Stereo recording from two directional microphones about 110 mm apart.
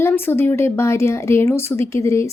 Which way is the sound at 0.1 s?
20° left (ahead or behind).